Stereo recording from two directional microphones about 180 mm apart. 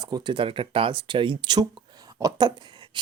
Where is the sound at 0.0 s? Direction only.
25° right (ahead or behind).